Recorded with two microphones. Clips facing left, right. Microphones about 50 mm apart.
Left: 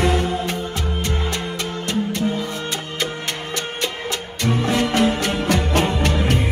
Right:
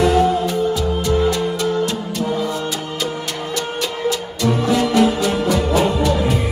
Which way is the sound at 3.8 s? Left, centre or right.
Left.